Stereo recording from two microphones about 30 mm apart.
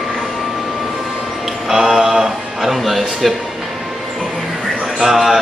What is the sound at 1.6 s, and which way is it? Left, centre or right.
Speech, centre.